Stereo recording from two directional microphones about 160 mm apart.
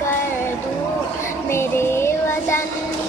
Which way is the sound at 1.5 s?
15° left (ahead or behind).